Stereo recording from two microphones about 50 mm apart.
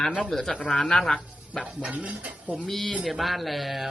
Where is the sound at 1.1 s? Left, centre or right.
Left.